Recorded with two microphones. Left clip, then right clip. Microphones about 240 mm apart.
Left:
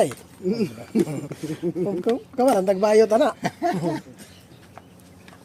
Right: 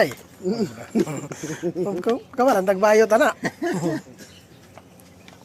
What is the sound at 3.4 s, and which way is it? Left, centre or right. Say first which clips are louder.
Speech: left 2 dB; left.